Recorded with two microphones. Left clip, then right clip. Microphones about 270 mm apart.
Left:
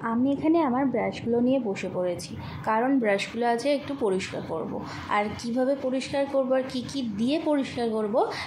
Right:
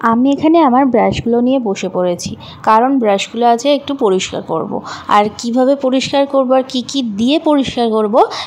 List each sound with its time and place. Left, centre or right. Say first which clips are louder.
0.0 s a woman's voice: right 14 dB; right